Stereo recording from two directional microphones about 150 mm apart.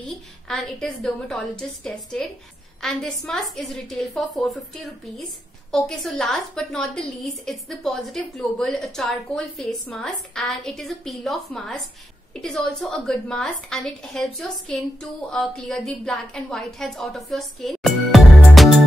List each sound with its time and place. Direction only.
0.0 s a woman's voice: 5° left (ahead or behind)